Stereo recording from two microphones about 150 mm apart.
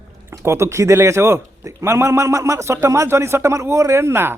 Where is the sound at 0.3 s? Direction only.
20° right (ahead or behind).